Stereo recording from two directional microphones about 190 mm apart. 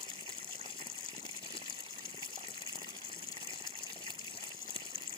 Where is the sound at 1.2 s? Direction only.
25° left (ahead or behind).